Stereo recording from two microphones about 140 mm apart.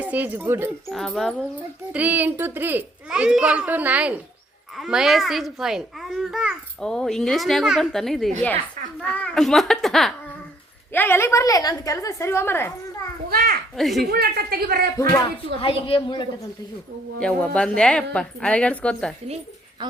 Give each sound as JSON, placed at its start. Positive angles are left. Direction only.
{"t": 0.0, "sound": "a child's voice", "side_deg": -10}
{"t": 0.9, "sound": "a child's voice", "side_deg": 0}
{"t": 1.9, "sound": "a child's voice", "side_deg": -10}
{"t": 10.9, "sound": "a woman's voice", "side_deg": 15}
{"t": 13.3, "sound": "children playing", "side_deg": -90}
{"t": 13.7, "sound": "a child's voice", "side_deg": 0}
{"t": 14.1, "sound": "speech", "side_deg": -90}
{"t": 15.6, "sound": "a woman's voice", "side_deg": 35}
{"t": 17.2, "sound": "a woman's voice", "side_deg": 5}
{"t": 19.8, "sound": "a sound", "side_deg": -30}